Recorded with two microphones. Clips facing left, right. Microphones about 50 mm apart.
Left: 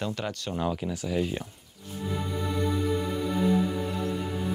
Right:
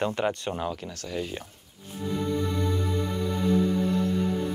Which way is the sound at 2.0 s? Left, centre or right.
Centre.